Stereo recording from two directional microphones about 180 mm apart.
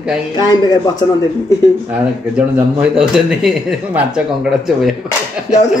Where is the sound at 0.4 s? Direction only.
20° left (ahead or behind).